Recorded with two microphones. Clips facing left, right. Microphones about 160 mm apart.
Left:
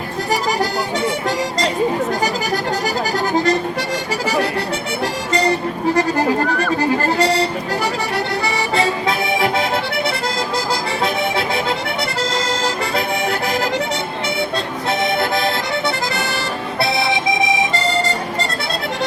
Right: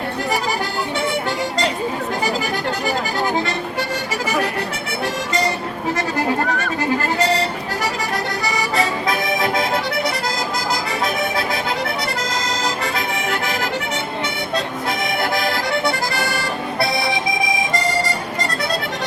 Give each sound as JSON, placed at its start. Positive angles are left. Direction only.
{"t": 5.9, "sound": "music", "side_deg": 35}
{"t": 8.7, "sound": "music", "side_deg": 30}
{"t": 11.0, "sound": "music", "side_deg": 30}
{"t": 15.2, "sound": "accordion", "side_deg": 25}
{"t": 16.8, "sound": "accordion", "side_deg": 25}